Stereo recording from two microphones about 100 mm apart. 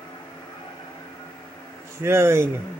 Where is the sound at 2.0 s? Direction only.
25° right (ahead or behind).